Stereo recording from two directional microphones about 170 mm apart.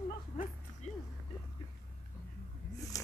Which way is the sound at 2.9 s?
20° left (ahead or behind).